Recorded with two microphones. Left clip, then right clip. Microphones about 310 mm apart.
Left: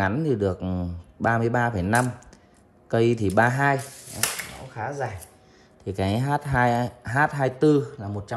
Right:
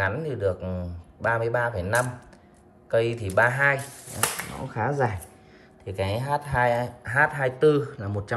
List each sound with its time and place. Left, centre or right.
0.0 s speech: centre
4.6 s speech: centre
5.9 s speech: centre